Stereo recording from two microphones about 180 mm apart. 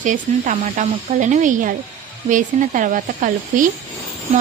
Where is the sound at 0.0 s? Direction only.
45° right (ahead or behind).